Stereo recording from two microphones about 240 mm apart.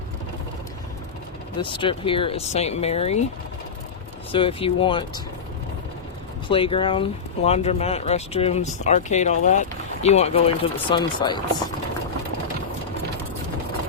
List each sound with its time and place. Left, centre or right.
1.5 s speech: left
4.3 s speech: left
6.5 s speech: left